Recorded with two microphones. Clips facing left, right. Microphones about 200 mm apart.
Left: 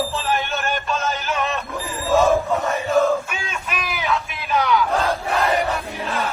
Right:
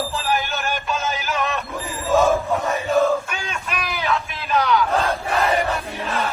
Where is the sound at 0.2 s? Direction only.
Centre (ahead or behind).